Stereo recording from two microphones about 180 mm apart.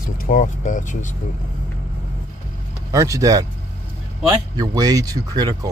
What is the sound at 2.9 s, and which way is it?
Speech, 20° right (ahead or behind).